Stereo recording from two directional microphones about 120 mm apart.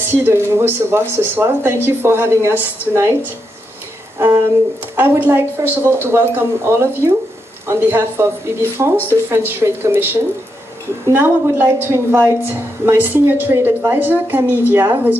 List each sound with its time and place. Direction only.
0.0 s speech: 20° right (ahead or behind)
4.2 s a sound: 25° right (ahead or behind)
4.9 s a woman's voice: 15° right (ahead or behind)
5.7 s speech: 15° left (ahead or behind)
6.1 s a woman's voice: 20° right (ahead or behind)